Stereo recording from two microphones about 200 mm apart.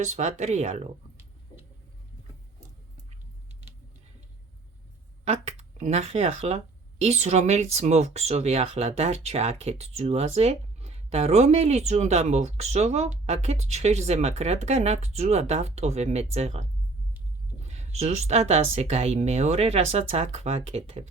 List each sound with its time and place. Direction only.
0.0 s speech: 35° right (ahead or behind)
5.2 s speech: 35° right (ahead or behind)
17.7 s speech: 35° right (ahead or behind)